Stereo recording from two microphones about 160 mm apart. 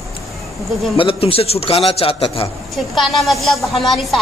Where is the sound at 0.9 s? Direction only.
35° left (ahead or behind).